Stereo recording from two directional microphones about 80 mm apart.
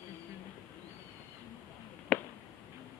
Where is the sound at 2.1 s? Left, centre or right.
Centre.